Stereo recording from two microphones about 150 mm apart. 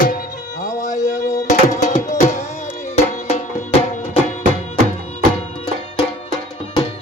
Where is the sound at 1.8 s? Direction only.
50° left (ahead or behind).